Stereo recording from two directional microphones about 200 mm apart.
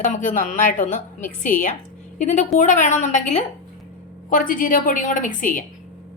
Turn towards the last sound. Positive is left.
turn(degrees=40)  # may be behind; listen again after turning